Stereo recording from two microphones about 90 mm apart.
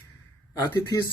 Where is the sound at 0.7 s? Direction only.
50° left (ahead or behind).